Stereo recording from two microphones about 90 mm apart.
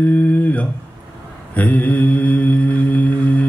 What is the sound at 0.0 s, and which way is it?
Speech, 20° left (ahead or behind).